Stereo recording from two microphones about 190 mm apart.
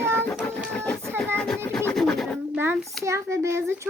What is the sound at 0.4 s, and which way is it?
Music, 5° left (ahead or behind).